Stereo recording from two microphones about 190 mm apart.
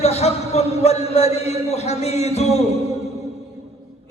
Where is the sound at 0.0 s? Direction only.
35° left (ahead or behind).